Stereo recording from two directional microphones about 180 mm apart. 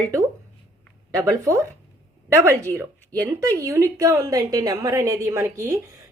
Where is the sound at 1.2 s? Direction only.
15° right (ahead or behind).